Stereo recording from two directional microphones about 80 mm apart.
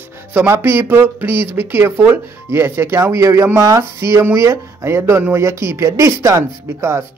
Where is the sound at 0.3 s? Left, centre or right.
Right.